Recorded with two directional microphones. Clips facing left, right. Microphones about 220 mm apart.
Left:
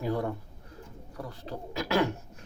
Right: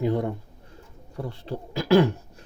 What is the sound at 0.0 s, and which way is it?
Speech, 20° right (ahead or behind).